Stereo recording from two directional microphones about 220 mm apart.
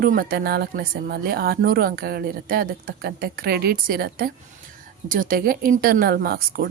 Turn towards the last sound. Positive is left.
turn(degrees=-45)  # may be behind; listen again after turning